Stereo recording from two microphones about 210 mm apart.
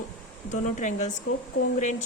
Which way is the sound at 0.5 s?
35° left (ahead or behind).